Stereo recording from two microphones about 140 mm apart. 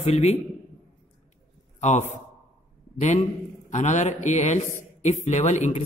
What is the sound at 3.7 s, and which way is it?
A man's voice, 60° left (ahead or behind).